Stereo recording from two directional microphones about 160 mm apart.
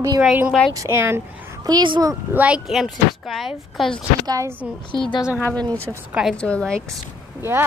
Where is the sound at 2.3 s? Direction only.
10° right (ahead or behind).